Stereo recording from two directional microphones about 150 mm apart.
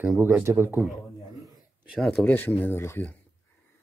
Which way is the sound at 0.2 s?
15° right (ahead or behind).